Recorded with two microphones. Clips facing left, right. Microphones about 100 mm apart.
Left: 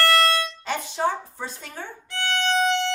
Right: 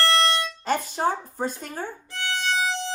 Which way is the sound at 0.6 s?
45° right (ahead or behind).